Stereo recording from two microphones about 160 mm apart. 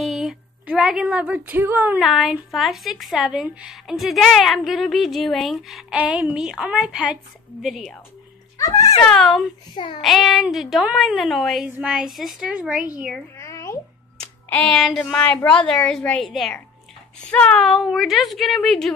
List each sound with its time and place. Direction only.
0.0 s speech: centre (ahead or behind)
2.0 s speech: centre (ahead or behind)
8.5 s speech: 20° left (ahead or behind)
9.0 s speech: 5° left (ahead or behind)
13.4 s a sound: 20° left (ahead or behind)
14.2 s speech: 5° left (ahead or behind)